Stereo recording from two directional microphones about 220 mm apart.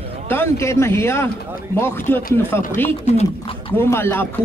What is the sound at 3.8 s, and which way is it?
Speech, 10° left (ahead or behind).